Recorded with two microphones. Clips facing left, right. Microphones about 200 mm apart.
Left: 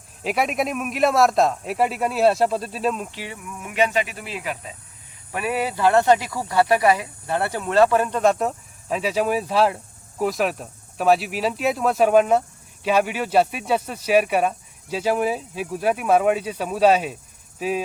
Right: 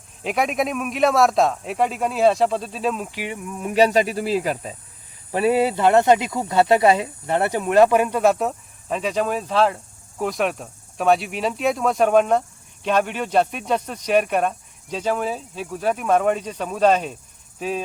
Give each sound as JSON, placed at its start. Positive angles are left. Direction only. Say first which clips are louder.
{"t": 0.2, "sound": "speech", "louder": "right 1 dB", "side_deg": 0}
{"t": 3.1, "sound": "a sound", "louder": "right 5 dB", "side_deg": -15}
{"t": 3.6, "sound": "speech", "louder": "right 5 dB", "side_deg": -35}